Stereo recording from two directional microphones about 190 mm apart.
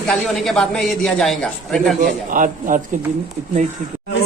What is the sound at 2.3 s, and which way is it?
Speech, 45° right (ahead or behind).